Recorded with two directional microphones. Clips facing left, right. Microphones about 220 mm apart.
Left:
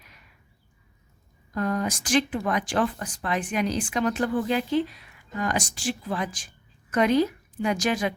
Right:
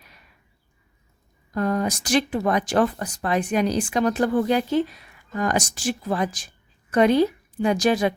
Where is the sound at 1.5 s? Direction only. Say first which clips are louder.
Right 3 dB; 35° right (ahead or behind).